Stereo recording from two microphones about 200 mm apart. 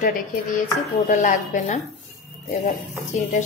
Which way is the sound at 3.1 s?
40° left (ahead or behind).